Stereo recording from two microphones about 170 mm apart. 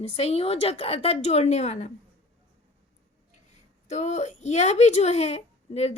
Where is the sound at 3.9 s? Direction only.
40° left (ahead or behind).